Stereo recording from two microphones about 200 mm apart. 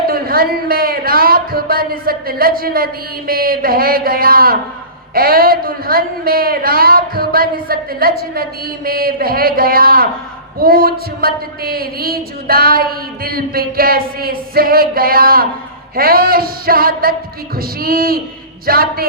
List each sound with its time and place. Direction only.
0.1 s speech: 50° right (ahead or behind)